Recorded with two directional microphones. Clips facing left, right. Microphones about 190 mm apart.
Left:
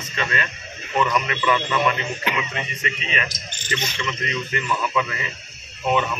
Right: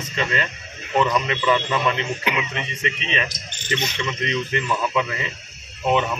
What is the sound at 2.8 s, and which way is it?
A man's voice, 25° right (ahead or behind).